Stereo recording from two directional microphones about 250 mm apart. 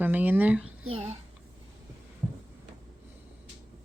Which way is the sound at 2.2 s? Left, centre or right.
Right.